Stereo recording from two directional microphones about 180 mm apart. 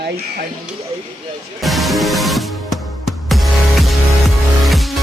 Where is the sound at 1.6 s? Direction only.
Centre (ahead or behind).